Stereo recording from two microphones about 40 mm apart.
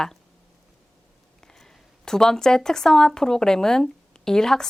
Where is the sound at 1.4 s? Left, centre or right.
Centre.